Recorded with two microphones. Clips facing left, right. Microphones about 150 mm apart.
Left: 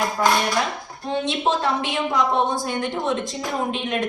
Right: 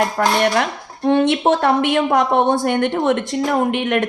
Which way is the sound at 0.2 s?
65° right (ahead or behind).